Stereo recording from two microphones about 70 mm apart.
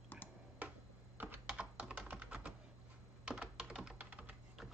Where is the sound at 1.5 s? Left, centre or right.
Centre.